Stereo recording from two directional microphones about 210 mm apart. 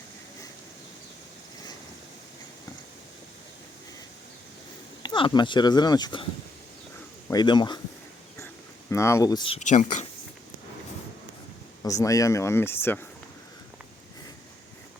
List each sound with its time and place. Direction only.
5.0 s speech: 20° left (ahead or behind)
7.3 s speech: 20° left (ahead or behind)
8.9 s speech: 15° left (ahead or behind)
9.6 s speech: 35° left (ahead or behind)
11.8 s speech: 15° left (ahead or behind)